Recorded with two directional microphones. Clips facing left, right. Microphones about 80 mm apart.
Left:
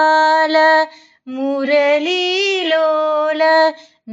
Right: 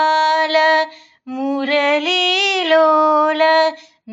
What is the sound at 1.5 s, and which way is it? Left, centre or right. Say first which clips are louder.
Female singing: left 3 dB; centre.